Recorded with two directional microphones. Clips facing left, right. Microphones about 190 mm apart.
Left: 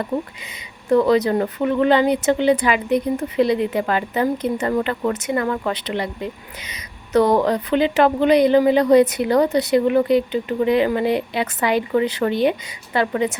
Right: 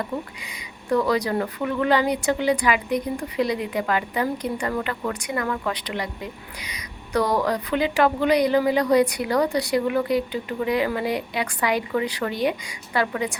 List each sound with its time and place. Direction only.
0.9 s speech: 25° left (ahead or behind)